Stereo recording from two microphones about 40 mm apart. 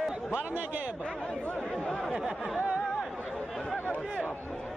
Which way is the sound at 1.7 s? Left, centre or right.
Left.